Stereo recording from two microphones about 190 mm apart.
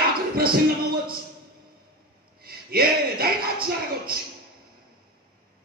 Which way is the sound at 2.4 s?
50° right (ahead or behind).